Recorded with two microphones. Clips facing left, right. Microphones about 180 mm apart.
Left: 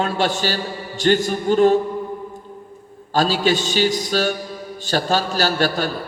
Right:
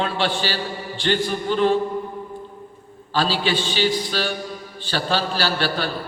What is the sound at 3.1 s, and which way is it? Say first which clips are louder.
A man's voice: left 4 dB; 45° left (ahead or behind).